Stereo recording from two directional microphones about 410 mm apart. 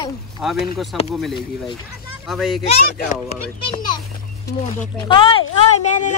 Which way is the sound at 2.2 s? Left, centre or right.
Centre.